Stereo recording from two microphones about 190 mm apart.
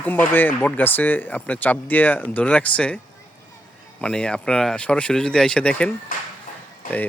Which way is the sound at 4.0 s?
5° left (ahead or behind).